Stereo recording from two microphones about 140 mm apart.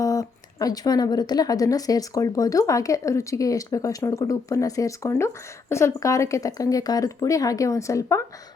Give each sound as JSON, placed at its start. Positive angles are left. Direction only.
{"t": 0.0, "sound": "speech", "side_deg": 25}